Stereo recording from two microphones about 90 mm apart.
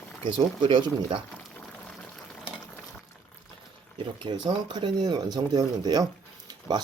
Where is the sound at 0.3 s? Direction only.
60° right (ahead or behind).